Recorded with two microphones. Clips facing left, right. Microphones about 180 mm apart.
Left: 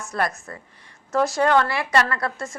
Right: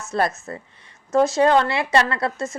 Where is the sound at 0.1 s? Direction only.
25° right (ahead or behind).